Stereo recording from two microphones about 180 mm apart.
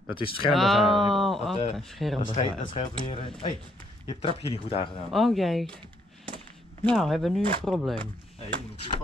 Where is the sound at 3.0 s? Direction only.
30° left (ahead or behind).